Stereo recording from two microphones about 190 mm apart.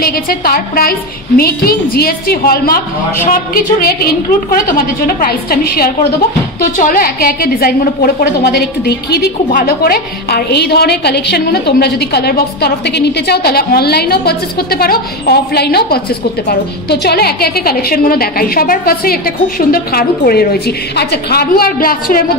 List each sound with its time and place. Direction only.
0.0 s a woman's voice: 55° left (ahead or behind)